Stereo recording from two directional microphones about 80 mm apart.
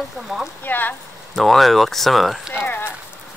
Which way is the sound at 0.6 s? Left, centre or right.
Left.